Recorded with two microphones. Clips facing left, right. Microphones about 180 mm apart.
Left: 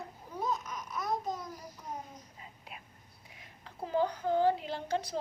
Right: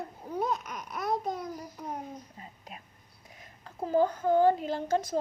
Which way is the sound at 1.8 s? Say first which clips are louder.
Right 4 dB; 65° right (ahead or behind).